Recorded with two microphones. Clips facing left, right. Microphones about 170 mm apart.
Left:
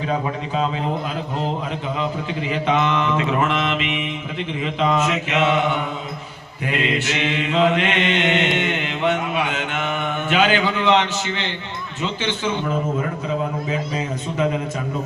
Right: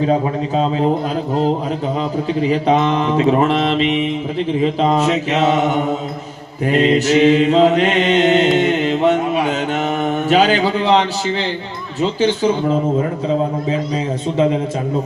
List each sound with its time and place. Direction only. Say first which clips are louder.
0.1 s mantra: right 6 dB; 35° right (ahead or behind)
2.0 s mantra: right 7 dB; 35° right (ahead or behind)